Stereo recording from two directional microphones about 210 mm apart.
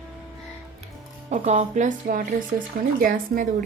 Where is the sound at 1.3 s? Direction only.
30° right (ahead or behind).